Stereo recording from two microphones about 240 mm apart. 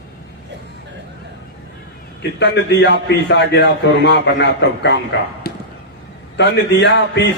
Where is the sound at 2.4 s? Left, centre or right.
Left.